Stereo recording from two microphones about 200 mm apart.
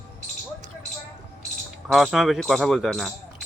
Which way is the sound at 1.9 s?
Centre (ahead or behind).